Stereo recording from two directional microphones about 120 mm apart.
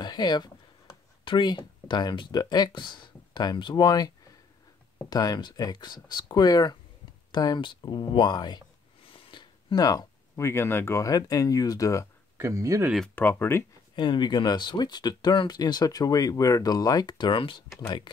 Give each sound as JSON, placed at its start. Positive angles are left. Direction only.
{"t": 0.0, "sound": "speech", "side_deg": 35}
{"t": 5.1, "sound": "speech", "side_deg": 35}
{"t": 12.4, "sound": "speech", "side_deg": -25}
{"t": 13.1, "sound": "speech", "side_deg": 15}
{"t": 13.9, "sound": "speech", "side_deg": 40}
{"t": 17.7, "sound": "speech", "side_deg": 30}